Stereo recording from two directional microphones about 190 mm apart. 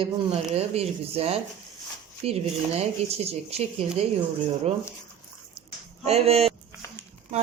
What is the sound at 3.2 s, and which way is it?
Speech, 35° right (ahead or behind).